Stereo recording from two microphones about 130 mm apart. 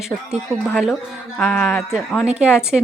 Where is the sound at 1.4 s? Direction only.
5° left (ahead or behind).